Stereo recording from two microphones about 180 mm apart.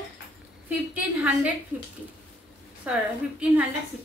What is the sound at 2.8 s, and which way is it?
Speech, 5° right (ahead or behind).